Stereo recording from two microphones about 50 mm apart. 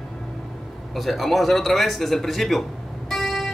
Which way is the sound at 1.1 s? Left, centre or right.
Centre.